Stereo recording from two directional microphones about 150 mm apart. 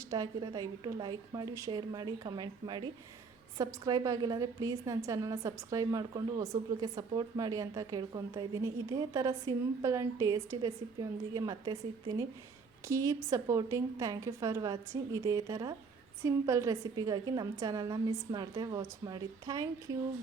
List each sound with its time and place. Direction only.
0.1 s a woman's voice: 25° right (ahead or behind)